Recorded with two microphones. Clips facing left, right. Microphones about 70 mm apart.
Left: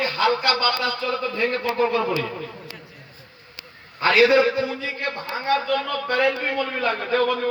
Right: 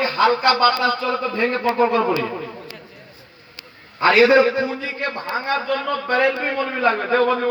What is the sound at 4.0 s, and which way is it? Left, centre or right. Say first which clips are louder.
A man's voice: right 3 dB; right.